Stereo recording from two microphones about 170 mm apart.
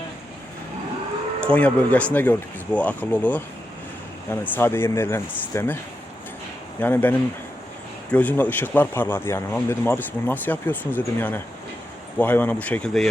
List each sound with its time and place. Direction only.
1.4 s speech: 5° left (ahead or behind)
6.7 s speech: 10° left (ahead or behind)